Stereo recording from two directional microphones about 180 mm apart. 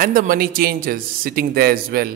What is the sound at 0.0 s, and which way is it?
Speech, 50° right (ahead or behind).